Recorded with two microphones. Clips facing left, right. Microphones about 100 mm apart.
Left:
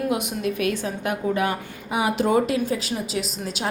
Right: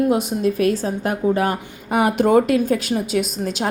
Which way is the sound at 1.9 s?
55° right (ahead or behind).